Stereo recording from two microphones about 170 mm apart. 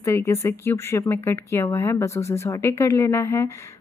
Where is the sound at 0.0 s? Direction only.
15° left (ahead or behind).